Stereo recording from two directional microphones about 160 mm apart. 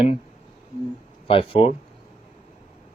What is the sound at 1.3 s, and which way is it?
Speech, 35° left (ahead or behind).